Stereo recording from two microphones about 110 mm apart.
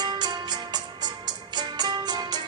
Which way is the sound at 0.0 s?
40° right (ahead or behind).